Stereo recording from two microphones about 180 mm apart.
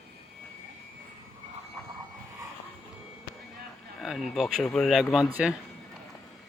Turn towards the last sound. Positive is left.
turn(degrees=-5)  # may be behind; listen again after turning